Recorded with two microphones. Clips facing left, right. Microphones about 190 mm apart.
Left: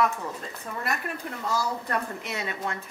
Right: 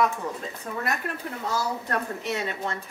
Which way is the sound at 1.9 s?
10° left (ahead or behind).